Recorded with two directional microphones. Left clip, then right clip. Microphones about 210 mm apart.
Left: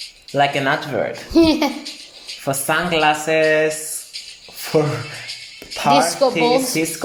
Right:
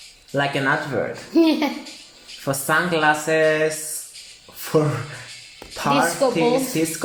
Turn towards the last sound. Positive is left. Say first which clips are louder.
# left 3 dB
turn(degrees=25)  # may be behind; listen again after turning